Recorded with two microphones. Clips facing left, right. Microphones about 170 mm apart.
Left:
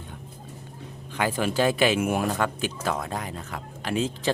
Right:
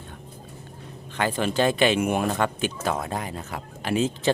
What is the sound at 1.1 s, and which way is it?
Speech, 10° left (ahead or behind).